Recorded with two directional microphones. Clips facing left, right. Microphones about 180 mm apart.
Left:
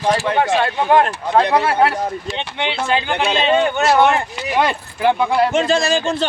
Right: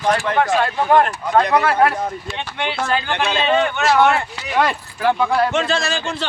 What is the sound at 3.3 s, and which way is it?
Speech, 35° left (ahead or behind).